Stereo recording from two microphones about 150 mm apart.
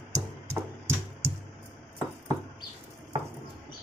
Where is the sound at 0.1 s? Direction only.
15° right (ahead or behind).